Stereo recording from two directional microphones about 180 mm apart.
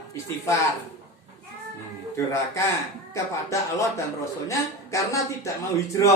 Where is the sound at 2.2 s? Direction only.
15° left (ahead or behind).